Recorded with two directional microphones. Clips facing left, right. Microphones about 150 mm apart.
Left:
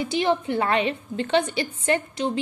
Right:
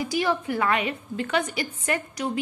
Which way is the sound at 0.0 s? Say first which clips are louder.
Left 2 dB; 25° left (ahead or behind).